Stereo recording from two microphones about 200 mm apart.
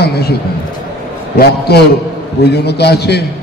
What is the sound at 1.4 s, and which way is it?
A man's voice, 55° left (ahead or behind).